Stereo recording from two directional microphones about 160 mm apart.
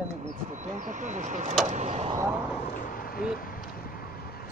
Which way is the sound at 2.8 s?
65° left (ahead or behind).